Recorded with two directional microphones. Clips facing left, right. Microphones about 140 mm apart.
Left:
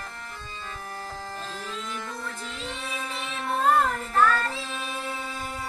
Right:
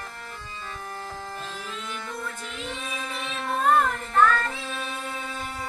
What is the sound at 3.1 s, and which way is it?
Child singing, 20° left (ahead or behind).